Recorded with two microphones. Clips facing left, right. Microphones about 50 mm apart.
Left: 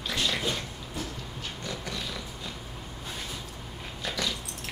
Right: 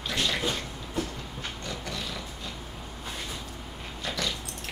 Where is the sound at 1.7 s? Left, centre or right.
Centre.